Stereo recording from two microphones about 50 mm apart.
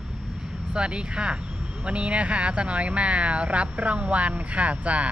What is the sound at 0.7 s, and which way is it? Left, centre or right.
Speech, centre.